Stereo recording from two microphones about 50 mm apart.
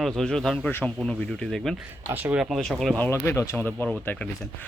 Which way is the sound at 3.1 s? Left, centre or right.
Left.